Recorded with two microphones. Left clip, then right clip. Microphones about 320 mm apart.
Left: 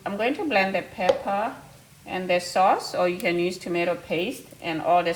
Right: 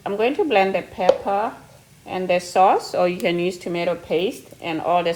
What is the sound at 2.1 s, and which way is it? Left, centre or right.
Speech, right.